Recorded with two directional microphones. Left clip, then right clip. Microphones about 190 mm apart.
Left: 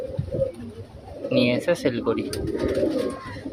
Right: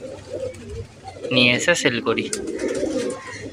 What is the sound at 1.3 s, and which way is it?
Speech, 5° left (ahead or behind).